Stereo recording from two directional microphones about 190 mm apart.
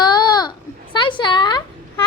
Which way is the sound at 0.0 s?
20° left (ahead or behind).